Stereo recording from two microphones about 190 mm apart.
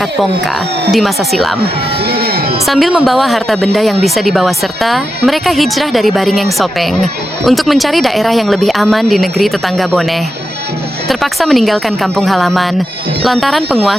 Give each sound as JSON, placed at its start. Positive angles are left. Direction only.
{"t": 0.0, "sound": "speech", "side_deg": 0}
{"t": 2.0, "sound": "music", "side_deg": -55}
{"t": 2.6, "sound": "speech", "side_deg": 0}